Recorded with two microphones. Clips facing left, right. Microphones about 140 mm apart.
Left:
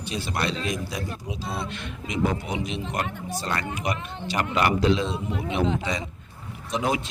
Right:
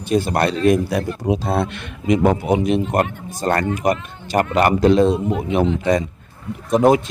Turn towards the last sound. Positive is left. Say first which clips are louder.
# right 12 dB
turn(degrees=-50)  # may be behind; listen again after turning